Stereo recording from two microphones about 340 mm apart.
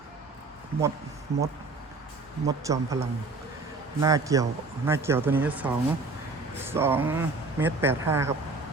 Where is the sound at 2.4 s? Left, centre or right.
Centre.